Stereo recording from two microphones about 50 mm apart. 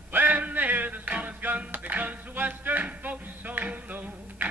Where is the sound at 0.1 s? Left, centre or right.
Right.